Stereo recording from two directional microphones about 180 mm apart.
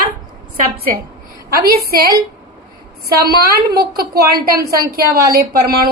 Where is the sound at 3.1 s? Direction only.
60° right (ahead or behind).